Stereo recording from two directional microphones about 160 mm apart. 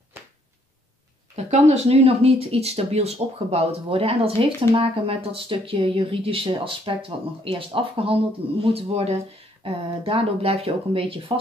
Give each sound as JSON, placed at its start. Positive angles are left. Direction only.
{"t": 1.3, "sound": "speech", "side_deg": -40}